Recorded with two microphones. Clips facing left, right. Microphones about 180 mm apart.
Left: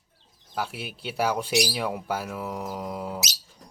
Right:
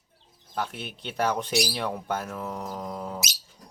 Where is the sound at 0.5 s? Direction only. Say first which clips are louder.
Even; 5° left (ahead or behind).